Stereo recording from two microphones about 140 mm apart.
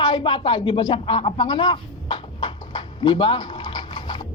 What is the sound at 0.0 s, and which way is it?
A man's voice, 35° left (ahead or behind).